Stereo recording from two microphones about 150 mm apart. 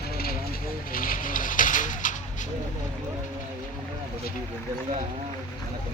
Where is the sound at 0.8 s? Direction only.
70° left (ahead or behind).